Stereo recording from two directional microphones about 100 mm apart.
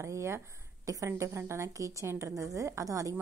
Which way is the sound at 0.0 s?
30° right (ahead or behind).